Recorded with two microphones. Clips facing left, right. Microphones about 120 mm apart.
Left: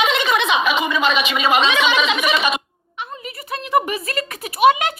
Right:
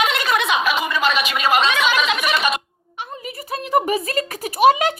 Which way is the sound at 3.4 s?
40° right (ahead or behind).